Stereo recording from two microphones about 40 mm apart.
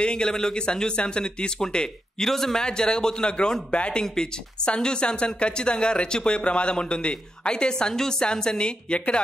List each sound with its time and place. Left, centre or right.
0.0 s speech: left
4.0 s speech: centre